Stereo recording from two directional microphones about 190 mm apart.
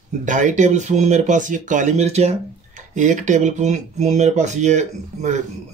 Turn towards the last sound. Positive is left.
turn(degrees=-40)  # may be behind; listen again after turning